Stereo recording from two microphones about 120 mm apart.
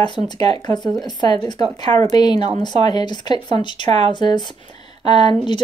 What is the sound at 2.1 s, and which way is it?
Speech, 35° left (ahead or behind).